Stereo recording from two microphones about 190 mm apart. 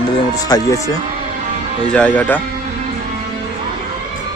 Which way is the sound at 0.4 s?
20° left (ahead or behind).